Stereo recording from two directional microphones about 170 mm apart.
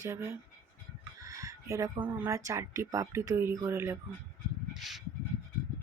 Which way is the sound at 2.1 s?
15° right (ahead or behind).